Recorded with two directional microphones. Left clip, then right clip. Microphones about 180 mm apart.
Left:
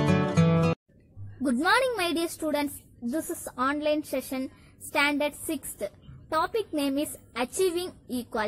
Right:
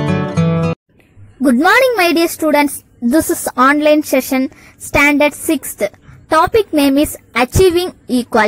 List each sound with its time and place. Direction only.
0.0 s music: centre (ahead or behind)
1.4 s a woman's voice: 40° right (ahead or behind)